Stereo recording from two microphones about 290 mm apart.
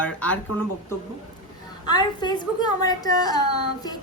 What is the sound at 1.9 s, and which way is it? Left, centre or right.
A woman's voice, centre.